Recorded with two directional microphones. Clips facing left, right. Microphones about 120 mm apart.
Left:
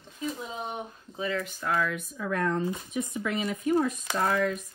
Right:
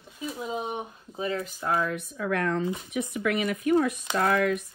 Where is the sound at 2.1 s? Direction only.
75° right (ahead or behind).